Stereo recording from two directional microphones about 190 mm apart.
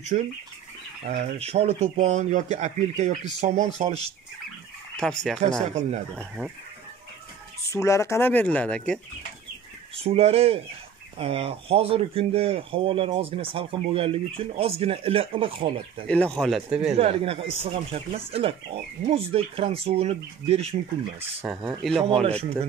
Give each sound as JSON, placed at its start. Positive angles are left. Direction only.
{"t": 0.1, "sound": "speech", "side_deg": -40}
{"t": 4.9, "sound": "speech", "side_deg": 5}
{"t": 5.6, "sound": "speech", "side_deg": -35}
{"t": 6.1, "sound": "speech", "side_deg": -5}
{"t": 7.7, "sound": "speech", "side_deg": 15}
{"t": 10.0, "sound": "speech", "side_deg": -30}
{"t": 16.1, "sound": "speech", "side_deg": 5}
{"t": 16.9, "sound": "speech", "side_deg": -30}
{"t": 21.5, "sound": "speech", "side_deg": 0}